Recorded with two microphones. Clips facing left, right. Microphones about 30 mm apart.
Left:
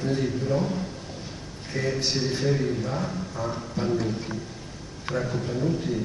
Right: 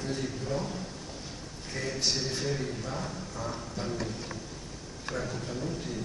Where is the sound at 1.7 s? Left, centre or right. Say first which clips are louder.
Left 5 dB; centre.